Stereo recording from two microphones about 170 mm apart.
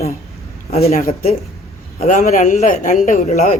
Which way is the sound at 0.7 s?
35° left (ahead or behind).